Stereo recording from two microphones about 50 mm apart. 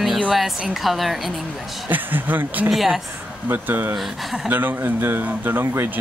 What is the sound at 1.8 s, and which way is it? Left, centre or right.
Speech, right.